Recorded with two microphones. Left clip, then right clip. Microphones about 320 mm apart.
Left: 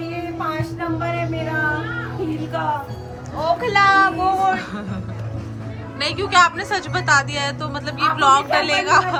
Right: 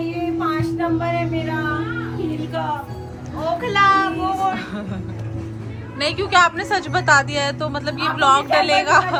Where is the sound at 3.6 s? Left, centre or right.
Left.